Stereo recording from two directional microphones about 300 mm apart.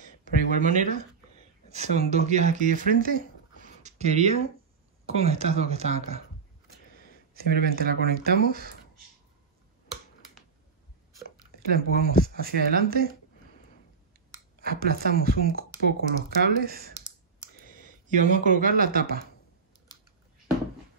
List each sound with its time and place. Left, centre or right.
0.2 s speech: right
7.3 s speech: right
11.7 s speech: right
14.6 s speech: right
17.6 s a sound: left
18.0 s speech: right